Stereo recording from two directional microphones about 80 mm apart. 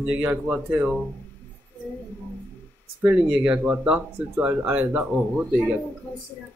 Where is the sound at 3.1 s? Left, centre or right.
Centre.